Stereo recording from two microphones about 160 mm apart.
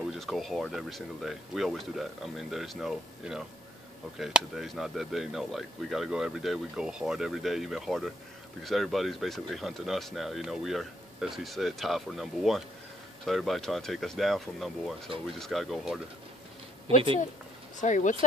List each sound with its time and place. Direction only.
0.1 s speech: centre (ahead or behind)
16.8 s speech: 35° right (ahead or behind)
17.7 s speech: 50° left (ahead or behind)